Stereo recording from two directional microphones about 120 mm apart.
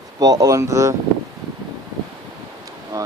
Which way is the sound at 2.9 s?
25° right (ahead or behind).